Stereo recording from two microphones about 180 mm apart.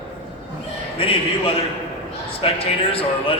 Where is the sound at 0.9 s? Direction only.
30° left (ahead or behind).